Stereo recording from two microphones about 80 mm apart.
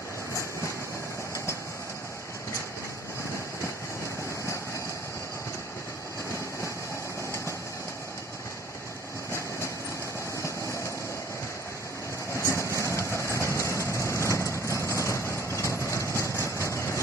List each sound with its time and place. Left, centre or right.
10.3 s vehicle: left
12.5 s vehicle: left